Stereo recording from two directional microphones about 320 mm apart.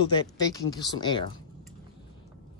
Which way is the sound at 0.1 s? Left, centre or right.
Centre.